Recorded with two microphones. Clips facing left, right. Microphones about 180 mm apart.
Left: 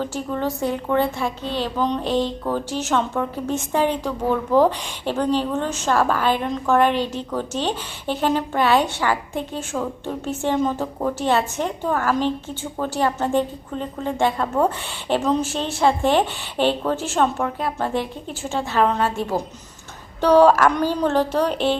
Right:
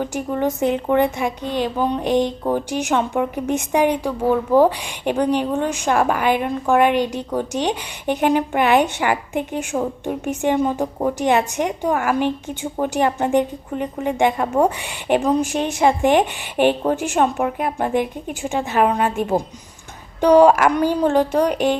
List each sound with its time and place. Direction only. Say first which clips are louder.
0.0 s a woman's voice: right 3 dB; 15° right (ahead or behind)